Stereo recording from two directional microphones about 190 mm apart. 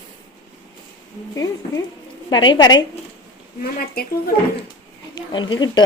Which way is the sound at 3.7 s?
50° left (ahead or behind).